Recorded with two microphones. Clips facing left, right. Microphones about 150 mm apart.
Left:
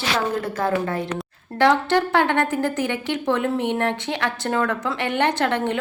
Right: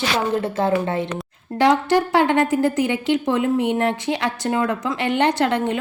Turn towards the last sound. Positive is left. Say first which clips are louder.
# right 2 dB
turn(degrees=-15)  # may be behind; listen again after turning